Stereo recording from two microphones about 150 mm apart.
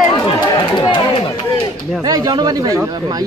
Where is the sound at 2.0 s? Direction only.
25° right (ahead or behind).